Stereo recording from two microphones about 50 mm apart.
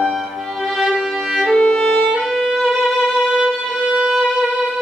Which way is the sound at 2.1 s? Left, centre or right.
Centre.